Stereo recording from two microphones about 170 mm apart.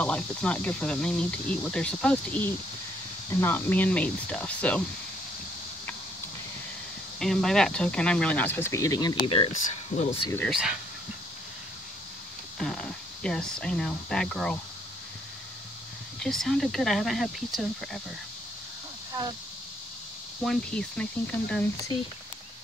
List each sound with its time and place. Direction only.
0.0 s speech: 5° left (ahead or behind)
7.2 s speech: 5° left (ahead or behind); by 9.1 s 20° left (ahead or behind)
9.2 s speech: 30° left (ahead or behind)
9.5 s speech: 45° left (ahead or behind)
10.5 s speech: 5° right (ahead or behind)
12.5 s speech: 5° left (ahead or behind)
16.2 s speech: centre (ahead or behind)
20.4 s speech: 5° left (ahead or behind)